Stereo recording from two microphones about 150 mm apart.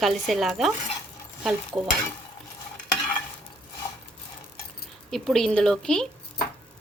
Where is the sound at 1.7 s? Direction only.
20° right (ahead or behind).